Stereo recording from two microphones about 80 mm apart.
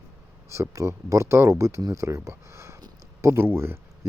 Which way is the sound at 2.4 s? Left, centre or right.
Right.